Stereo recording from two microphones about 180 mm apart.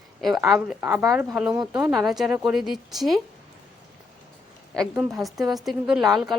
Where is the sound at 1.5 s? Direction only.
25° right (ahead or behind).